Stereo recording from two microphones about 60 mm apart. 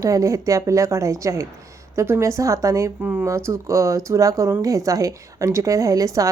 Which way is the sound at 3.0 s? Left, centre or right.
Right.